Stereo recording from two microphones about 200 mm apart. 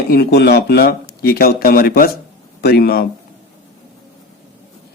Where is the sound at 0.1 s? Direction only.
55° left (ahead or behind).